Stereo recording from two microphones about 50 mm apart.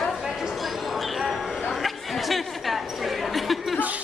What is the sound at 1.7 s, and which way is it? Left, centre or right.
Chatter, centre.